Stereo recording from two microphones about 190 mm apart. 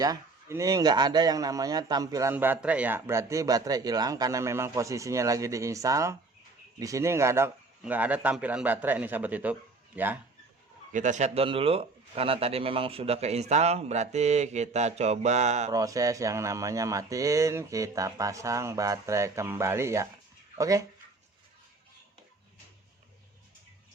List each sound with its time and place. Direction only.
0.0 s speech: 15° right (ahead or behind)
10.9 s a man's voice: 40° right (ahead or behind)
15.7 s speech: 15° right (ahead or behind)